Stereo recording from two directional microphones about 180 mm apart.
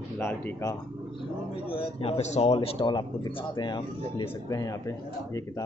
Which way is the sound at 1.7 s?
30° left (ahead or behind).